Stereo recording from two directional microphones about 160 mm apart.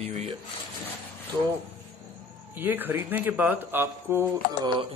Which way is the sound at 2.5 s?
10° right (ahead or behind).